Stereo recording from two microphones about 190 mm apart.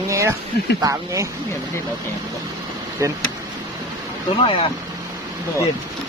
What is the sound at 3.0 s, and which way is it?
Speech, 15° right (ahead or behind).